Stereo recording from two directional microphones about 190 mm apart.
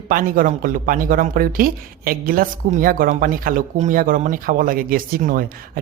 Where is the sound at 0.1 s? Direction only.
45° right (ahead or behind).